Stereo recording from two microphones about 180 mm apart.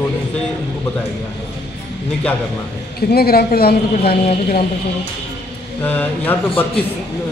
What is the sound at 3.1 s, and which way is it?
A woman's voice, 60° left (ahead or behind).